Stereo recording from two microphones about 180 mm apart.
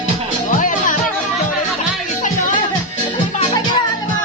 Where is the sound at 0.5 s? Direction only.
45° left (ahead or behind).